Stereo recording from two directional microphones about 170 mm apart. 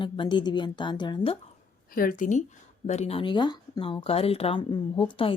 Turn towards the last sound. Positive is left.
turn(degrees=30)  # may be behind; listen again after turning